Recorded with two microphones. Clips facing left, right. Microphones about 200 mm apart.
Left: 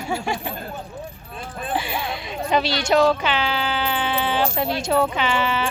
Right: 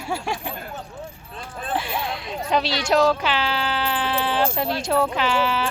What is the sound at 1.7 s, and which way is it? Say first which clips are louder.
Speech: even; centre (ahead or behind).